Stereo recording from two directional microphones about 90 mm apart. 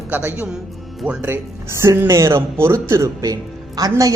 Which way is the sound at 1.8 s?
30° right (ahead or behind).